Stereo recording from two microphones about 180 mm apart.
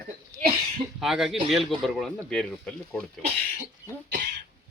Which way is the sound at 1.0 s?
Centre (ahead or behind).